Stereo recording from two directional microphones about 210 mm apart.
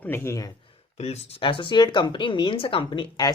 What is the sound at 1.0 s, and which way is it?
Speech, 30° left (ahead or behind).